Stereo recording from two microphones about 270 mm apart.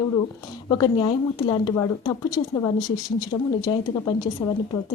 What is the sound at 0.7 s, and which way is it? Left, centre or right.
Speech, centre.